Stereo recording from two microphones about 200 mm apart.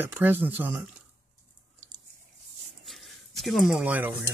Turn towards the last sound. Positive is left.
turn(degrees=-5)  # may be behind; listen again after turning